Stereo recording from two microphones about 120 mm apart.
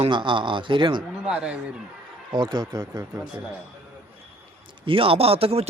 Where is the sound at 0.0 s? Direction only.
40° right (ahead or behind).